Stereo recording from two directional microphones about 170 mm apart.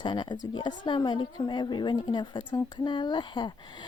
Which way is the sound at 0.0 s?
25° left (ahead or behind).